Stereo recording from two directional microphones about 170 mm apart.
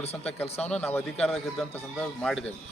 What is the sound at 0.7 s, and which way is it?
Speech, 10° left (ahead or behind).